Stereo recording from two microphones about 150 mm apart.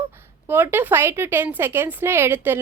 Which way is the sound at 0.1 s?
15° right (ahead or behind).